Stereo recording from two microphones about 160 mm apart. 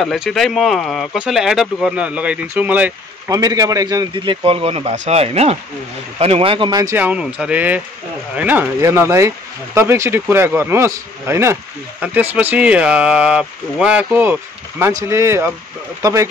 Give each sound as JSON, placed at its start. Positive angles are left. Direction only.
{"t": 0.0, "sound": "speech", "side_deg": 0}
{"t": 3.3, "sound": "a man's voice", "side_deg": -20}